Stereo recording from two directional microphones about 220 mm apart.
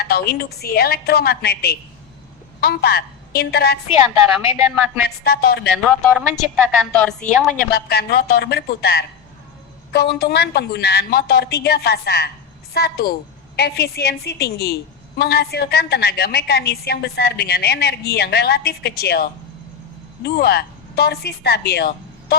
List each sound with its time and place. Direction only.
0.0 s a woman's voice: 45° left (ahead or behind)
4.4 s a woman's voice: 10° right (ahead or behind)
5.0 s a woman's voice: 45° left (ahead or behind)
5.7 s a woman's voice: centre (ahead or behind)
7.7 s a woman's voice: 45° left (ahead or behind)